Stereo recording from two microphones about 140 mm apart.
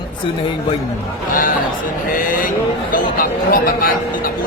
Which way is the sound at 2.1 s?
75° left (ahead or behind).